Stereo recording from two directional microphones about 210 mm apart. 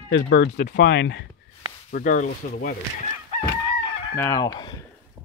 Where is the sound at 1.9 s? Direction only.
40° left (ahead or behind).